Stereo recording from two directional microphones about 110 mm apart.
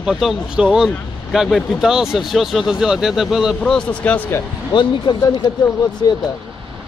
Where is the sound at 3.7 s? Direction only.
15° left (ahead or behind).